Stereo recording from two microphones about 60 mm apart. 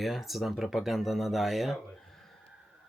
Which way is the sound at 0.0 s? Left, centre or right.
Centre.